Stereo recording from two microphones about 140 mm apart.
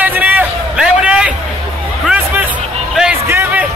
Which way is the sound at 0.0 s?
10° right (ahead or behind).